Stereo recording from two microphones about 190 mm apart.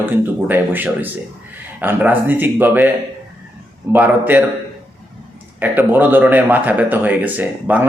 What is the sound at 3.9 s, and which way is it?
Speech, 10° right (ahead or behind).